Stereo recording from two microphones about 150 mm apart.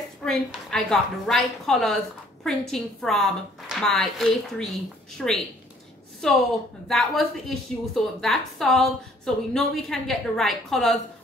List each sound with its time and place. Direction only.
0.2 s a woman's voice: 5° left (ahead or behind)
6.9 s a woman's voice: centre (ahead or behind)